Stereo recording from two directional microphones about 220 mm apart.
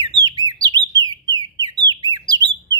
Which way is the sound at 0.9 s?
60° right (ahead or behind).